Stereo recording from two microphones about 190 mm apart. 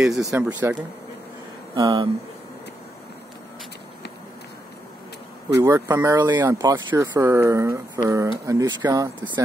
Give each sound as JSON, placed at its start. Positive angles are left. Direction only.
{"t": 0.0, "sound": "speech", "side_deg": 0}
{"t": 0.3, "sound": "speech", "side_deg": -10}
{"t": 1.8, "sound": "speech", "side_deg": -20}
{"t": 5.6, "sound": "speech", "side_deg": -15}